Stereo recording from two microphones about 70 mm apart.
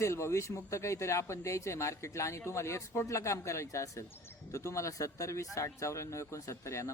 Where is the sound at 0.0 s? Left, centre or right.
Left.